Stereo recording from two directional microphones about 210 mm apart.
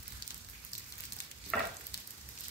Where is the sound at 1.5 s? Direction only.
5° left (ahead or behind).